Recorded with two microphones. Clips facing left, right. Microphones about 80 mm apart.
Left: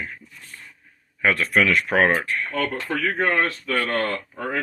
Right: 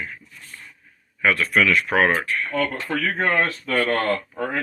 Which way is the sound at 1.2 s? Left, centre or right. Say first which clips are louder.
Even; left.